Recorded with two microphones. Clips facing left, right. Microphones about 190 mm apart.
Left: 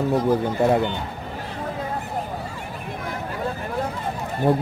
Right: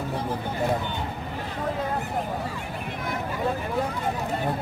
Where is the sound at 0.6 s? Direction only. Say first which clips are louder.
Left 6 dB; 65° left (ahead or behind).